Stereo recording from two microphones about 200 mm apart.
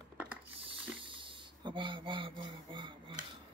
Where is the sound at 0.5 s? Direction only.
25° right (ahead or behind).